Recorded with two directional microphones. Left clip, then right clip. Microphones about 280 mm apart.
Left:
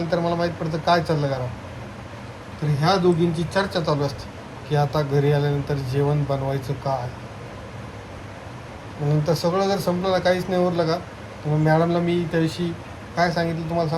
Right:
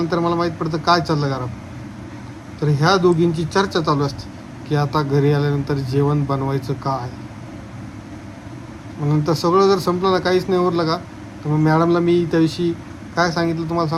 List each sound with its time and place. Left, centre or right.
0.1 s speech: centre
2.8 s speech: centre
9.2 s speech: centre